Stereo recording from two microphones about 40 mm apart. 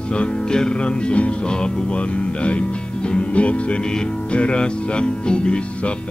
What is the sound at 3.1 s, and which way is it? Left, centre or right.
Music, left.